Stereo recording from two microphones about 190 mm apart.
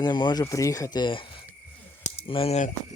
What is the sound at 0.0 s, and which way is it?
Speech, 20° left (ahead or behind).